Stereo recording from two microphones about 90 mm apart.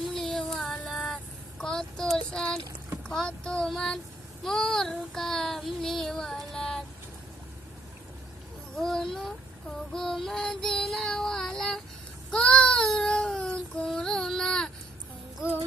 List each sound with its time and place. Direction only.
0.0 s child singing: 5° left (ahead or behind)
3.0 s a sound: 10° left (ahead or behind)
4.4 s child singing: 5° left (ahead or behind)
8.7 s child singing: 5° left (ahead or behind)